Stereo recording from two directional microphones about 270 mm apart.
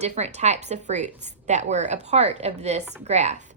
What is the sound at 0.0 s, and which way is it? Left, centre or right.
A woman's voice, right.